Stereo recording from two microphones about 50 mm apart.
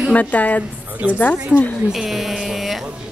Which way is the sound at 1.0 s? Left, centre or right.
Right.